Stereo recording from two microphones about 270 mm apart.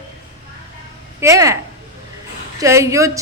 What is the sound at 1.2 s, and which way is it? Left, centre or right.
Speech, centre.